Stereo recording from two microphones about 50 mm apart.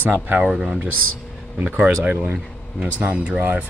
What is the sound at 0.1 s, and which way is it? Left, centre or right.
Speech, right.